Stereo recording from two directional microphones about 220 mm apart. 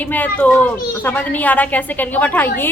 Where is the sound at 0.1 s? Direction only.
5° left (ahead or behind).